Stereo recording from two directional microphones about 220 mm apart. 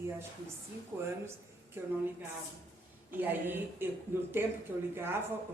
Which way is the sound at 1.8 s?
10° right (ahead or behind).